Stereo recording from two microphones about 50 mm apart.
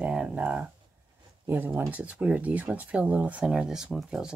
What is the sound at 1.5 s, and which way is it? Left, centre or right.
Speech, right.